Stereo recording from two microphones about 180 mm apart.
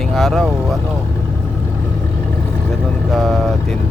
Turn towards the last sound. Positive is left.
turn(degrees=0)  # may be behind; listen again after turning